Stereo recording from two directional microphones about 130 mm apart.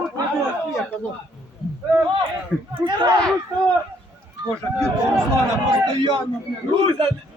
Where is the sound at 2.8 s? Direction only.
35° right (ahead or behind).